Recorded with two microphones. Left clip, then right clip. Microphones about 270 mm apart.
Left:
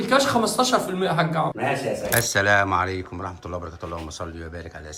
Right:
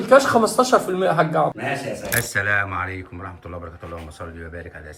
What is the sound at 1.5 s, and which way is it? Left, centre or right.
Speech, centre.